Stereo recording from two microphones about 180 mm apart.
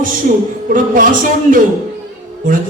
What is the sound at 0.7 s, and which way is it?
Speech, 50° right (ahead or behind).